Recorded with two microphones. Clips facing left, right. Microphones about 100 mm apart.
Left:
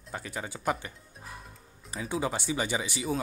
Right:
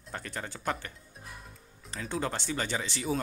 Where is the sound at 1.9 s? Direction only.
10° left (ahead or behind).